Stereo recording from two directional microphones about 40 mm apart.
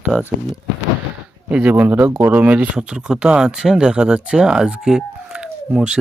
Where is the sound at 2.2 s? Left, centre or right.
Right.